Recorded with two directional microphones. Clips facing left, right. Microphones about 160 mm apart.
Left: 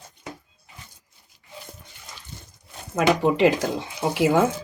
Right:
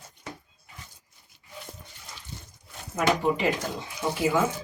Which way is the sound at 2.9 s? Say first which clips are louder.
Left 4 dB; 90° left.